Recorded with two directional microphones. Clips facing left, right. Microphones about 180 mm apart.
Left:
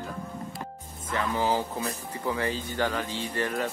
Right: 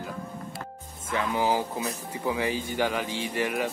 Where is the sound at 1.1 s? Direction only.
15° right (ahead or behind).